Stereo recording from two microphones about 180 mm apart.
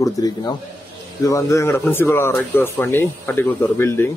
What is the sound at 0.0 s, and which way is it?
A man's voice, 20° left (ahead or behind).